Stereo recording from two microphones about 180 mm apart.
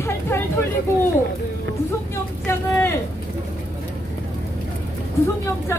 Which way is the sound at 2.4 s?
15° left (ahead or behind).